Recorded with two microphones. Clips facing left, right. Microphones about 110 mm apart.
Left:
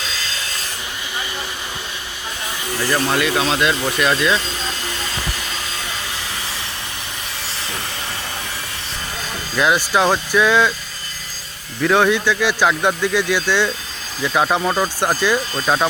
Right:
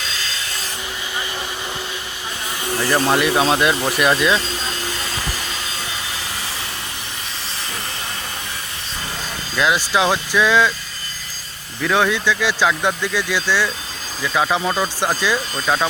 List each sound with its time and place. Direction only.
2.9 s speech: 20° right (ahead or behind)
9.9 s speech: centre (ahead or behind)
11.8 s speech: 5° left (ahead or behind)